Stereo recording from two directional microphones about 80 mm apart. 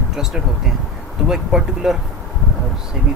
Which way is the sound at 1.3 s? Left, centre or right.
Centre.